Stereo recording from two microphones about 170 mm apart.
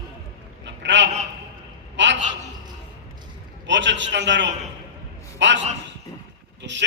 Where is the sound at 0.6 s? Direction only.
90° right.